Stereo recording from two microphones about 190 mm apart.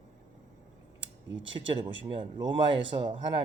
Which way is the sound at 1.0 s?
75° right (ahead or behind).